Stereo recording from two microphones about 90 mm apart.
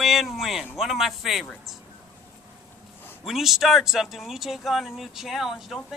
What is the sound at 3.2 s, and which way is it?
Speech, 5° right (ahead or behind).